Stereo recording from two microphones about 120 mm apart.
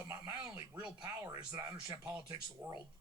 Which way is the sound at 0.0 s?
25° right (ahead or behind).